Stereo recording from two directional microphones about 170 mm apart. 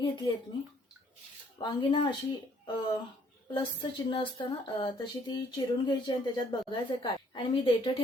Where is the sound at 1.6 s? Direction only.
30° left (ahead or behind).